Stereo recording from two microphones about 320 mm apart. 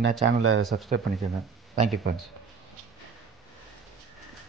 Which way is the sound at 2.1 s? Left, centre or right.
Right.